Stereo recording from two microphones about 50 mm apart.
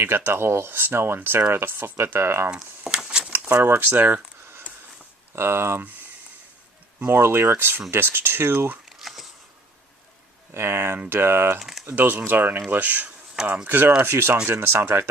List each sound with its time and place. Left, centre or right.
0.3 s speech: right
2.5 s a sound: centre
3.6 s speech: right
5.3 s speech: right
7.0 s speech: right
8.9 s camera: centre
10.5 s speech: right
11.9 s speech: right